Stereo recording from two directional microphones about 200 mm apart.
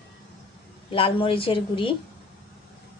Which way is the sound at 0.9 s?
25° left (ahead or behind).